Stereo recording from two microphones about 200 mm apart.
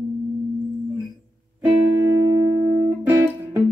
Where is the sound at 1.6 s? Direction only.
15° right (ahead or behind).